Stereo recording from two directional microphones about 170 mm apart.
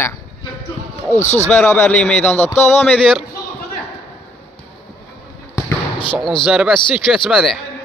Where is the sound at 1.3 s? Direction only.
10° left (ahead or behind).